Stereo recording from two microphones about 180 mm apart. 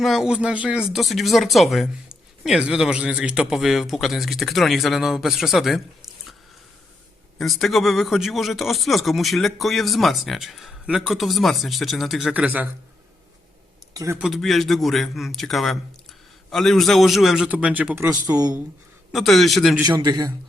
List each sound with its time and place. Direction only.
0.0 s speech: centre (ahead or behind)
7.3 s speech: centre (ahead or behind)
13.9 s speech: 15° right (ahead or behind)
14.2 s speech: centre (ahead or behind); by 18.5 s 20° right (ahead or behind)
19.1 s speech: centre (ahead or behind)
19.8 s a man's voice: 20° right (ahead or behind)